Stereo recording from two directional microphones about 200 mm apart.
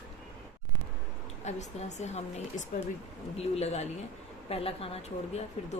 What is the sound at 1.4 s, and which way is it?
A woman's voice, 35° left (ahead or behind).